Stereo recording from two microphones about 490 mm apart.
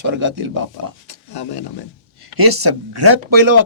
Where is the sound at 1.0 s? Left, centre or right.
Left.